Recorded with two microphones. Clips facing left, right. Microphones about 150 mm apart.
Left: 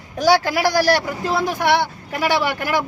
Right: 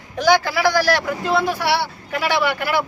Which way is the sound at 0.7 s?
40° left (ahead or behind).